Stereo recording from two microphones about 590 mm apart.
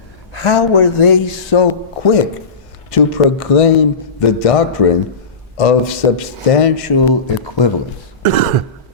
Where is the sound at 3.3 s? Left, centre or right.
Left.